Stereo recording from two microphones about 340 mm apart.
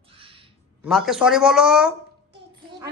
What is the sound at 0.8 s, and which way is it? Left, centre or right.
A man's voice, centre.